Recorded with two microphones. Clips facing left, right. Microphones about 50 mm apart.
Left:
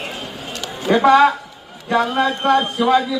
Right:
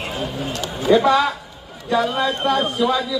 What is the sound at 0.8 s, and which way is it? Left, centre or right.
A man's voice, left.